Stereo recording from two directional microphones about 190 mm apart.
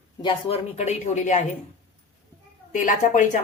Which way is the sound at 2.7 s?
40° left (ahead or behind).